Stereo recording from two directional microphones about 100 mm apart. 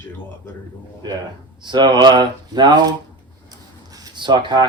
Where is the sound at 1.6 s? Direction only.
50° right (ahead or behind).